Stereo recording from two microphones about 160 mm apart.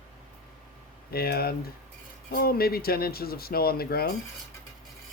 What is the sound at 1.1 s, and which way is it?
Speech, 75° left (ahead or behind).